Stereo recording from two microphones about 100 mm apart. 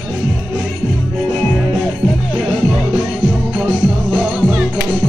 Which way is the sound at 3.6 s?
10° right (ahead or behind).